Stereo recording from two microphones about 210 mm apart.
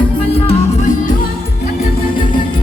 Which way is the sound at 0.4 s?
40° left (ahead or behind).